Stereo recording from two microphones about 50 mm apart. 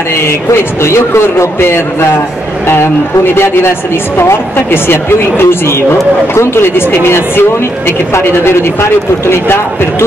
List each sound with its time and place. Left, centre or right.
0.5 s a man's voice: left